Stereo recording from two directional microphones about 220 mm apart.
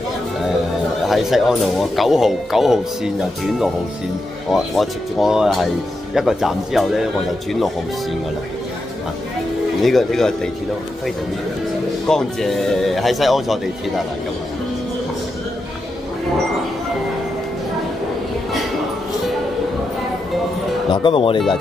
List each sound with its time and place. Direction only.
1.0 s speech: centre (ahead or behind)
9.8 s speech: centre (ahead or behind)
12.1 s speech: centre (ahead or behind)
20.9 s speech: 25° left (ahead or behind)